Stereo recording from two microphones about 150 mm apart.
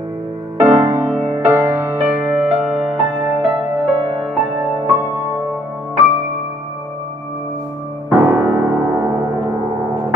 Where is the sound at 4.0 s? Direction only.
30° right (ahead or behind).